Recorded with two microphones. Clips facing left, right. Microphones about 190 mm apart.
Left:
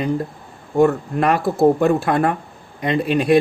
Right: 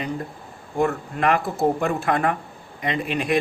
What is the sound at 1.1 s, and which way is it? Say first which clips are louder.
Speech: left 1 dB; 40° left (ahead or behind).